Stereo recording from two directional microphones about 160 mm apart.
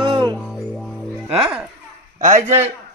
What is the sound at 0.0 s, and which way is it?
Music, 30° right (ahead or behind).